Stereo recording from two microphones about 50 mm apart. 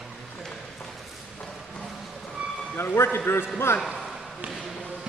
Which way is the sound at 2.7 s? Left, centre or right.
Left.